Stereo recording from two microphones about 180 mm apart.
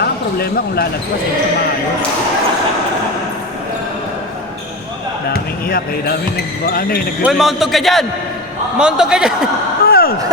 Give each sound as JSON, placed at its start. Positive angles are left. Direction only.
{"t": 0.0, "sound": "speech", "side_deg": 60}
{"t": 5.6, "sound": "speech", "side_deg": 55}
{"t": 7.2, "sound": "a man's voice", "side_deg": -5}
{"t": 9.8, "sound": "a sound", "side_deg": 55}